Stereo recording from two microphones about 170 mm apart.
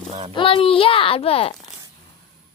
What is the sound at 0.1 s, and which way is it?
Speech, 35° right (ahead or behind).